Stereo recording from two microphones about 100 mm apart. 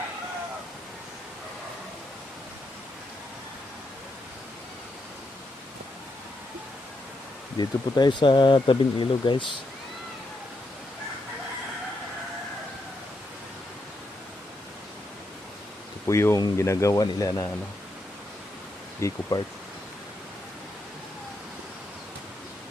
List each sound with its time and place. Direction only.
7.6 s speech: 45° left (ahead or behind)
16.0 s speech: 30° left (ahead or behind)
18.9 s speech: 30° left (ahead or behind)